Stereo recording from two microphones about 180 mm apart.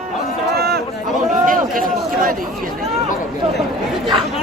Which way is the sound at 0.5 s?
60° right (ahead or behind).